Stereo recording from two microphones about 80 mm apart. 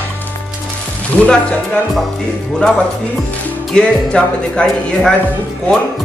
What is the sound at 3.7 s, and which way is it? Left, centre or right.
Speech, centre.